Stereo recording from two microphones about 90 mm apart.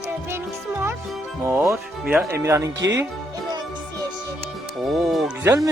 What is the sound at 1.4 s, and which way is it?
Speech, 30° right (ahead or behind).